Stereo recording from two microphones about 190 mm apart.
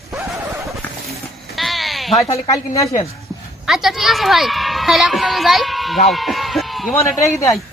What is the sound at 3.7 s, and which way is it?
A woman's voice, centre (ahead or behind).